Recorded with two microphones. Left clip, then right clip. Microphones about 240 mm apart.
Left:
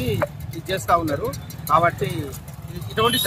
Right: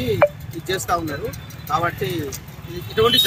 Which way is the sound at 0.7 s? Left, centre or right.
Left.